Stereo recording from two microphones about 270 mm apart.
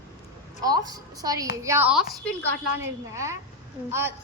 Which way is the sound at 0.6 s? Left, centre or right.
Centre.